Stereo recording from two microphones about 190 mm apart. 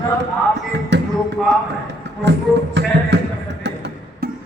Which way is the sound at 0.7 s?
65° right (ahead or behind).